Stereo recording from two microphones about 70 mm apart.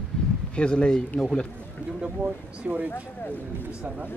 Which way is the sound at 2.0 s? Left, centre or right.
Centre.